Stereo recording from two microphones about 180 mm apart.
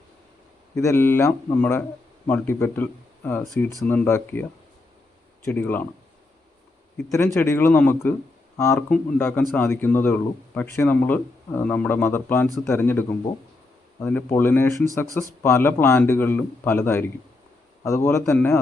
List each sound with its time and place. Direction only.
0.8 s speech: 15° left (ahead or behind)
5.5 s speech: 10° left (ahead or behind)
6.9 s speech: 15° left (ahead or behind)